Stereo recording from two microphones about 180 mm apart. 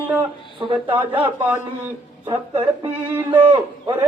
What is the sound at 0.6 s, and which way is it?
Speech, 30° right (ahead or behind).